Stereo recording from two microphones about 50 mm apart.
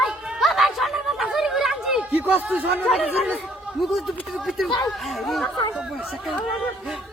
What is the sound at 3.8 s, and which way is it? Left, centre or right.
Speech, centre.